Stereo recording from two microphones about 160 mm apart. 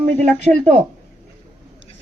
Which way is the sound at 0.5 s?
50° right (ahead or behind).